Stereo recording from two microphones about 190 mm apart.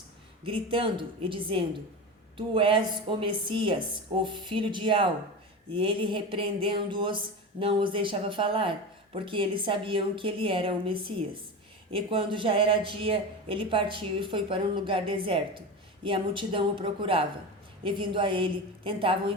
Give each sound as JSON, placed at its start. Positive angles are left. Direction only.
{"t": 0.4, "sound": "speech", "side_deg": -30}